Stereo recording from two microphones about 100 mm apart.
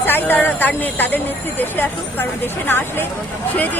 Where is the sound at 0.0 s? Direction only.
20° left (ahead or behind).